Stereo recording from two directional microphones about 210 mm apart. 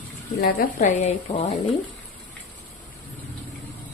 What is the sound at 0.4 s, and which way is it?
A woman's voice, 35° left (ahead or behind).